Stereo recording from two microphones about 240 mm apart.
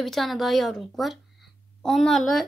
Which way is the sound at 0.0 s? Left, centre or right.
Centre.